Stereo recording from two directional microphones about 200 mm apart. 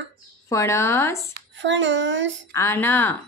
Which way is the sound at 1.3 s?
65° right (ahead or behind).